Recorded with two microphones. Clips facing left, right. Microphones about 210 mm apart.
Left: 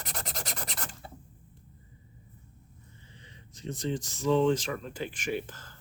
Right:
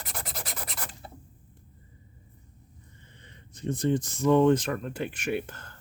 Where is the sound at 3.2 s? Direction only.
55° right (ahead or behind).